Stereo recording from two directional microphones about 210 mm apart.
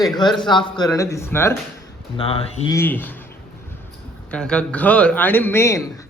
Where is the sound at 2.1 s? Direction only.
25° left (ahead or behind).